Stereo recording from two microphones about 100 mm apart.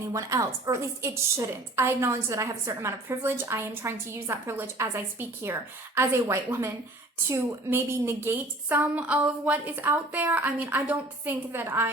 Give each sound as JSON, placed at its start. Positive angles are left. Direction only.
{"t": 0.1, "sound": "a woman's voice", "side_deg": -35}